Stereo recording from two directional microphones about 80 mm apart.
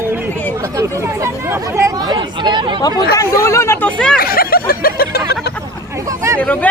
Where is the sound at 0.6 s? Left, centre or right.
Right.